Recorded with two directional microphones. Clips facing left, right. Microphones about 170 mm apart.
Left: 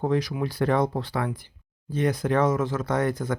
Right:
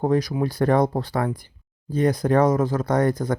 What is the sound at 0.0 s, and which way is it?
Speech, 40° right (ahead or behind).